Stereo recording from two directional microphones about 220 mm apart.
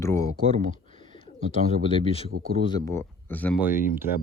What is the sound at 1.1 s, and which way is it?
Speech, 25° left (ahead or behind).